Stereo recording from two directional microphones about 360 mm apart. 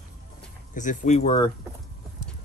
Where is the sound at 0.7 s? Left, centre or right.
Left.